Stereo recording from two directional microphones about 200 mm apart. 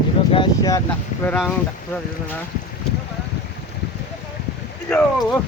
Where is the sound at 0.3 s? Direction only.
25° left (ahead or behind).